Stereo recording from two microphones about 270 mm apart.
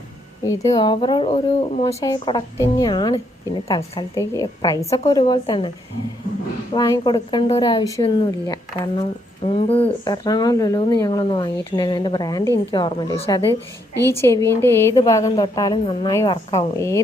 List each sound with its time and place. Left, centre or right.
0.4 s speech: centre
6.7 s speech: centre